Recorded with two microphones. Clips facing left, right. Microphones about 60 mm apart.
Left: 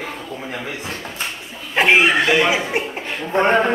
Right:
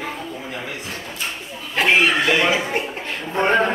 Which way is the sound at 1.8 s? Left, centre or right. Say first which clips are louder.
Left 2 dB; centre.